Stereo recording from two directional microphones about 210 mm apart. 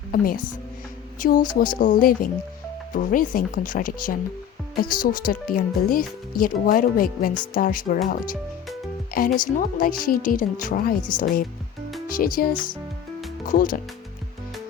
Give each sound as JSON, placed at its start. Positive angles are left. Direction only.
{"t": 0.1, "sound": "speech", "side_deg": 40}
{"t": 12.0, "sound": "speech", "side_deg": 40}